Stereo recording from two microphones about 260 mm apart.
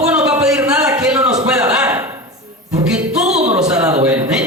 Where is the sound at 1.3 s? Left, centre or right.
Centre.